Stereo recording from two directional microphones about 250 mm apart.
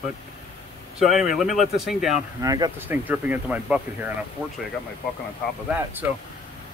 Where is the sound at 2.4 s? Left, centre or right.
Centre.